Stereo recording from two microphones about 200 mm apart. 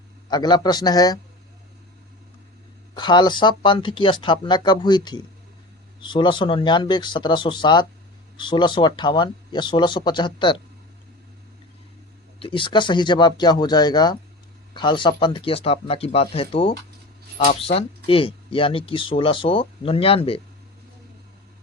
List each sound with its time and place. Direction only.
0.3 s speech: 20° left (ahead or behind)
2.9 s speech: 20° left (ahead or behind)
12.4 s speech: 25° left (ahead or behind)